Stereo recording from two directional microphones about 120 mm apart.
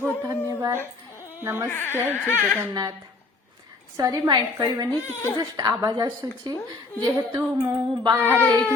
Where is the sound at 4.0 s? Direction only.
35° right (ahead or behind).